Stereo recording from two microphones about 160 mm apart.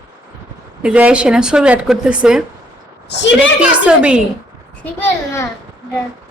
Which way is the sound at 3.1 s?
90° left.